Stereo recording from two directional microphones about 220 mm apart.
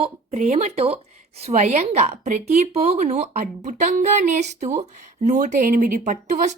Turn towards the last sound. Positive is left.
turn(degrees=-35)  # may be behind; listen again after turning